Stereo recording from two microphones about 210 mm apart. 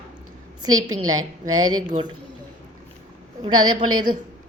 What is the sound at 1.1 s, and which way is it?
Speech, 80° right.